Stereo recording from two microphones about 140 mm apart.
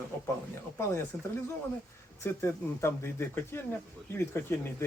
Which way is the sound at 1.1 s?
15° left (ahead or behind).